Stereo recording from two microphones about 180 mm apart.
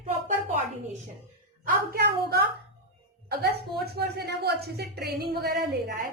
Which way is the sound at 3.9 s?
65° right (ahead or behind).